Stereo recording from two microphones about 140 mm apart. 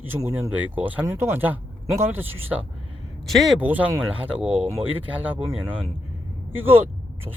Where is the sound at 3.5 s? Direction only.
10° right (ahead or behind).